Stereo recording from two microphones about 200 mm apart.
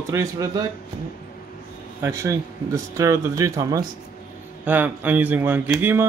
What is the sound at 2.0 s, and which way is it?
Speech, 15° right (ahead or behind).